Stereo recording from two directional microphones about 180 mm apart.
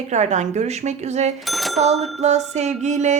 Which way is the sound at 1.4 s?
Centre (ahead or behind).